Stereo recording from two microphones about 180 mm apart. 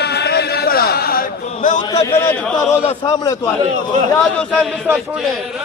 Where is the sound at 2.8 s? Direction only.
20° left (ahead or behind).